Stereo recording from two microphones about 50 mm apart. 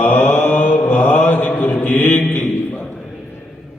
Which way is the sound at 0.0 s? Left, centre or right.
Left.